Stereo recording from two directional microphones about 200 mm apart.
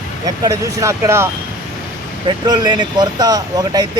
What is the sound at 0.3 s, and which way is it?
Speech, 15° right (ahead or behind).